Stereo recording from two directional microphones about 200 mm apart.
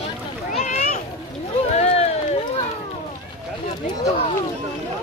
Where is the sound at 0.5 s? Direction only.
35° left (ahead or behind).